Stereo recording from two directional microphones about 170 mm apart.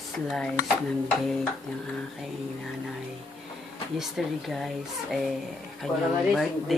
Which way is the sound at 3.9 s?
Centre (ahead or behind).